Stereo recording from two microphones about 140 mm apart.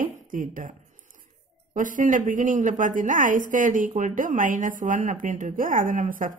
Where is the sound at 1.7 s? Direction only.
70° right (ahead or behind).